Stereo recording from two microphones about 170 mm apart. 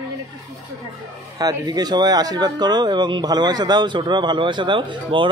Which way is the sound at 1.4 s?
20° right (ahead or behind).